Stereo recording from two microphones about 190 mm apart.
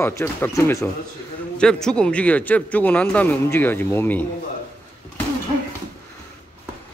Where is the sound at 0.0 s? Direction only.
15° left (ahead or behind).